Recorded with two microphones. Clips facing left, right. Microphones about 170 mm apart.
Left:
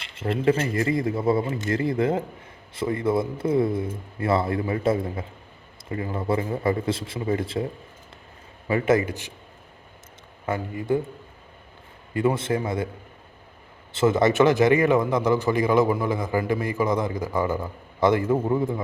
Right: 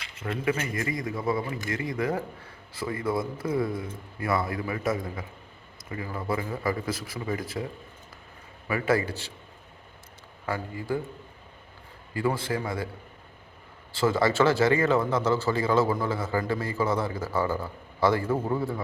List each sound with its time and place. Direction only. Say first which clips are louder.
0.0 s a man's voice: left 7 dB; 30° left (ahead or behind)
10.4 s a man's voice: left 4 dB; 20° left (ahead or behind)
12.1 s a man's voice: left 5 dB; 20° left (ahead or behind)
13.9 s a man's voice: left 4 dB; 20° left (ahead or behind)